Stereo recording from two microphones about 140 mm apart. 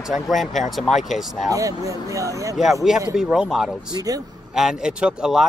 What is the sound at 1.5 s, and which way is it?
Speech, 25° right (ahead or behind).